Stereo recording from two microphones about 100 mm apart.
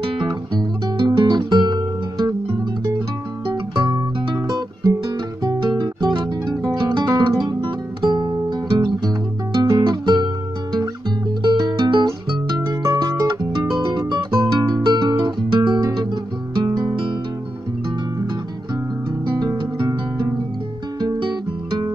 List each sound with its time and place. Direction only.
0.3 s music: 45° right (ahead or behind)
4.5 s guitar: 40° right (ahead or behind)
6.1 s music: 45° right (ahead or behind)
12.6 s music: 35° right (ahead or behind)
16.6 s music: 40° right (ahead or behind)
19.3 s music: 45° right (ahead or behind)